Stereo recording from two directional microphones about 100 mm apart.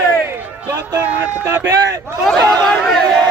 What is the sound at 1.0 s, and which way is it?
Speech, 15° right (ahead or behind).